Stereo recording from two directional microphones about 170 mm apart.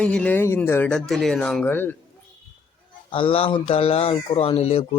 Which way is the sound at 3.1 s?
30° left (ahead or behind).